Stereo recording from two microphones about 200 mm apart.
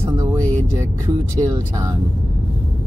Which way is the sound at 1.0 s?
15° right (ahead or behind).